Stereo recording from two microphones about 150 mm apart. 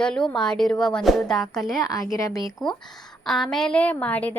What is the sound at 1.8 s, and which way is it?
Speech, 25° left (ahead or behind).